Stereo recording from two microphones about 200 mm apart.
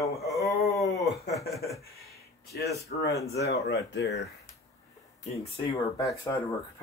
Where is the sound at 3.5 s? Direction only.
60° left (ahead or behind).